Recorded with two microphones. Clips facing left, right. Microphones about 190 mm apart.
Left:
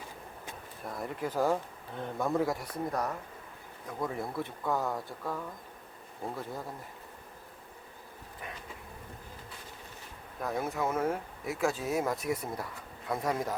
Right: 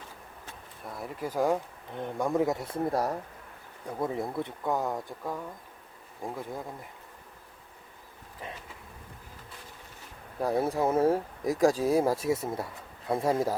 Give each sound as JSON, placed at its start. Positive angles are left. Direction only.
{"t": 0.9, "sound": "speech", "side_deg": 0}
{"t": 10.4, "sound": "speech", "side_deg": -30}